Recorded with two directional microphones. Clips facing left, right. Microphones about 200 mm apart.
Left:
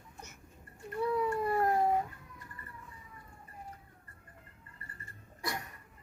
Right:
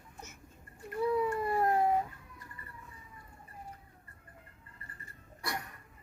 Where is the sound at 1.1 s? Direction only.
Centre (ahead or behind).